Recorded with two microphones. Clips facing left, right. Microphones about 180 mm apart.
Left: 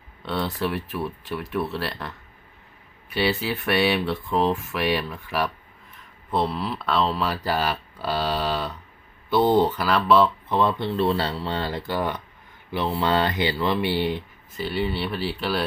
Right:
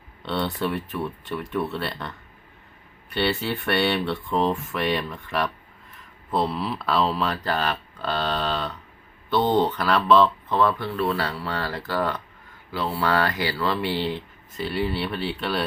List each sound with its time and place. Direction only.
0.2 s speech: centre (ahead or behind)
10.5 s speech: 20° left (ahead or behind)
14.5 s speech: centre (ahead or behind)